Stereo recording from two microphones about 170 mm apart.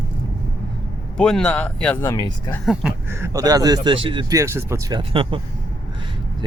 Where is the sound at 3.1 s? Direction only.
15° right (ahead or behind).